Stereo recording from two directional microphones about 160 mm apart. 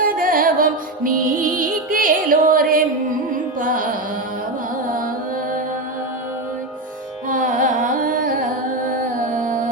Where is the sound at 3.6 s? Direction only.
60° right (ahead or behind).